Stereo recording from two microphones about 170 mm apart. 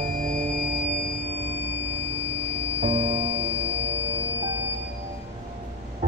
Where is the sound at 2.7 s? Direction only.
35° right (ahead or behind).